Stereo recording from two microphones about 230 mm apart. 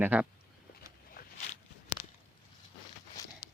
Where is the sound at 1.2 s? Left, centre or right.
Left.